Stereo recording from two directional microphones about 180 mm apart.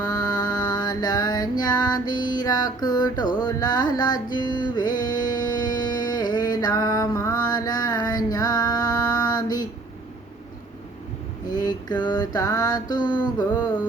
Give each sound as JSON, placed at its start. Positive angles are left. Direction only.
{"t": 0.0, "sound": "music", "side_deg": 20}
{"t": 3.4, "sound": "mantra", "side_deg": 20}
{"t": 11.4, "sound": "mantra", "side_deg": 20}